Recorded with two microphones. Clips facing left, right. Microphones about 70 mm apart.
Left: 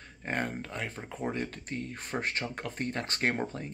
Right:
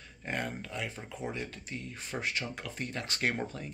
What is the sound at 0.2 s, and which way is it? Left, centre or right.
Speech, left.